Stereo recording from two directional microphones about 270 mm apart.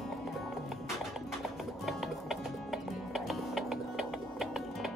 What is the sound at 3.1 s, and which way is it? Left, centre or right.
Music, centre.